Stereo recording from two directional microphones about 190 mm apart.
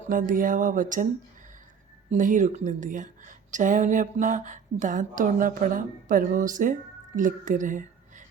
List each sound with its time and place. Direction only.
0.1 s speech: 45° right (ahead or behind)
2.0 s a woman's voice: 40° right (ahead or behind)